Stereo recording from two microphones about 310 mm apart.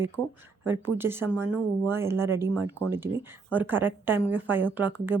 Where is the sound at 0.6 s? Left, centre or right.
Centre.